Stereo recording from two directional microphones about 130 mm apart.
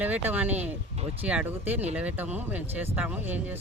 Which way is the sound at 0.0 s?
15° right (ahead or behind).